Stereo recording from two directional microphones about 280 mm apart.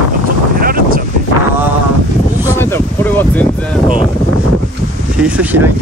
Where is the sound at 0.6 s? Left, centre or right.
Right.